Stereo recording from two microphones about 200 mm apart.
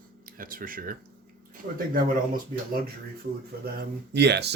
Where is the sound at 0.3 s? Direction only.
45° right (ahead or behind).